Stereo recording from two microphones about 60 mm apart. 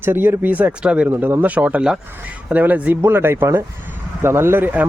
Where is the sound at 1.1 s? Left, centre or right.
Right; by 2.0 s centre.